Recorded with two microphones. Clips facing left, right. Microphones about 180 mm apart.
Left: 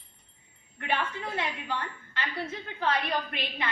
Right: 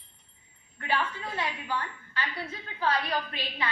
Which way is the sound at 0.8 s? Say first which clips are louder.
Even; 20° left (ahead or behind).